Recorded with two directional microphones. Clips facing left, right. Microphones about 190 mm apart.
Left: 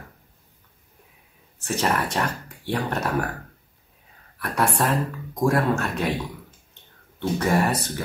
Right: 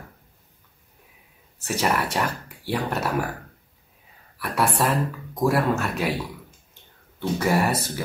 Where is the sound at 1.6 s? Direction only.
10° right (ahead or behind).